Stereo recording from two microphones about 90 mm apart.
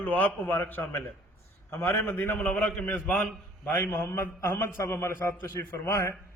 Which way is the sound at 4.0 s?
30° left (ahead or behind).